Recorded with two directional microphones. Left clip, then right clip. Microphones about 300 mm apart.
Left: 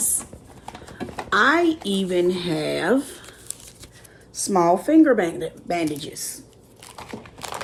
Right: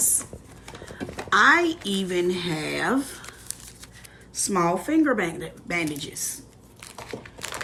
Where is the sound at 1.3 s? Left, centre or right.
Left.